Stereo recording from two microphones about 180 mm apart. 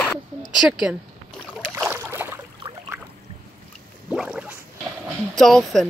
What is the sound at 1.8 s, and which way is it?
Boat, 10° right (ahead or behind).